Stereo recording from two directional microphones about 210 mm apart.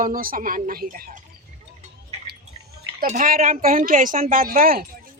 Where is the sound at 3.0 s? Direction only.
40° right (ahead or behind).